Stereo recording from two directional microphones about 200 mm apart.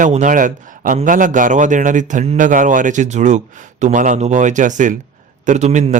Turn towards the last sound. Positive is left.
turn(degrees=-35)  # may be behind; listen again after turning